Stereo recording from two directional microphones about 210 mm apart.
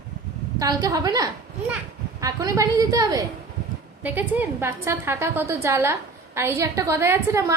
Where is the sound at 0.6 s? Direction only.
15° right (ahead or behind).